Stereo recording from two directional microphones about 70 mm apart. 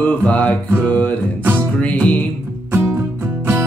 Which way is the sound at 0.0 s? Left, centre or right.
Centre.